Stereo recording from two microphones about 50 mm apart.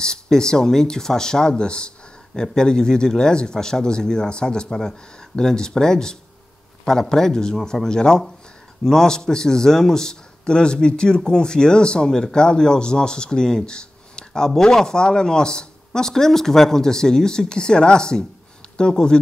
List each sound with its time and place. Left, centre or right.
0.0 s a man's voice: centre